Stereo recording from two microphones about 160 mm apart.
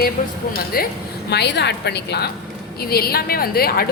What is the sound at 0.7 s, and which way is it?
Speech, 65° left (ahead or behind).